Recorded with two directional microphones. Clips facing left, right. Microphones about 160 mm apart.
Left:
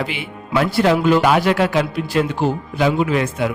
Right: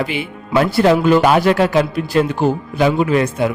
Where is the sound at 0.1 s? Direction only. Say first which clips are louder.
Right 4 dB; 45° right (ahead or behind).